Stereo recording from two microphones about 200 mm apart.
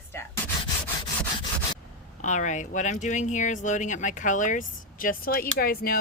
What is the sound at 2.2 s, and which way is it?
Speech, 40° left (ahead or behind).